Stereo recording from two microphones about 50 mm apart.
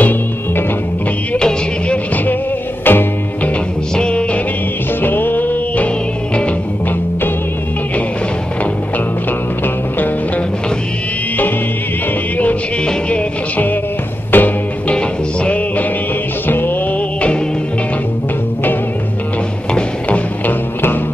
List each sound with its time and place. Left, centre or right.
2.8 s music: left
3.9 s music: left
5.0 s music: left
14.3 s music: left
14.9 s music: left
16.4 s music: left
20.4 s music: left